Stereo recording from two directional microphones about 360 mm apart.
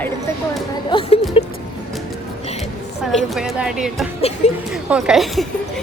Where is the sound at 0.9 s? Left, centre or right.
Centre.